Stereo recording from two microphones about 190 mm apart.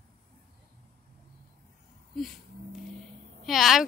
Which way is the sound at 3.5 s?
Centre (ahead or behind).